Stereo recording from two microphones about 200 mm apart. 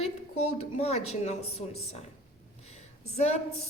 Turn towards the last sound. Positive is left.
turn(degrees=35)  # may be behind; listen again after turning